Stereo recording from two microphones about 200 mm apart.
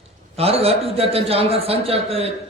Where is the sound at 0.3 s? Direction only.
30° right (ahead or behind).